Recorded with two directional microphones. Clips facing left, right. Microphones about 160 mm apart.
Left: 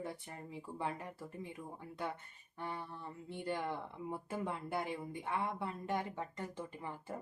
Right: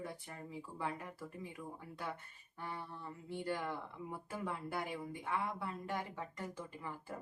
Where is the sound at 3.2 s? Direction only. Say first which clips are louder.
Left 1 dB; 20° left (ahead or behind).